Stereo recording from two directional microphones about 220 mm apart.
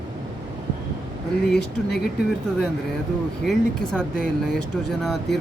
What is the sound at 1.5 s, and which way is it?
Speech, 45° left (ahead or behind).